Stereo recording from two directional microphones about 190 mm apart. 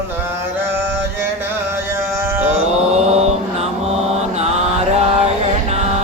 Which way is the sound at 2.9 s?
35° right (ahead or behind).